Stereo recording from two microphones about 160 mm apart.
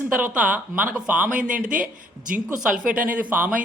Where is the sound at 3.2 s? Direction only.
10° right (ahead or behind).